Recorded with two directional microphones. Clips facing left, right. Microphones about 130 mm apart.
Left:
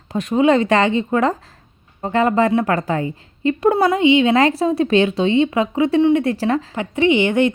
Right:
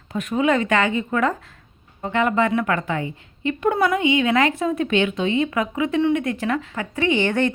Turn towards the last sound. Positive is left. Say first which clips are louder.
# left 5 dB
turn(degrees=15)  # may be behind; listen again after turning